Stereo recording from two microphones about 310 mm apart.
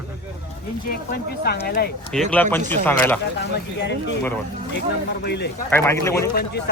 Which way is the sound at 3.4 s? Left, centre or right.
Left.